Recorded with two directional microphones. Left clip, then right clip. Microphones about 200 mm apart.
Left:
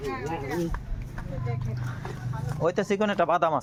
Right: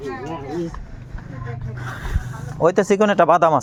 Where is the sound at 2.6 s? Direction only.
65° right (ahead or behind).